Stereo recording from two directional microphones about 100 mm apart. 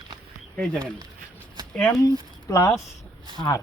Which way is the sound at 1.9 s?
35° left (ahead or behind).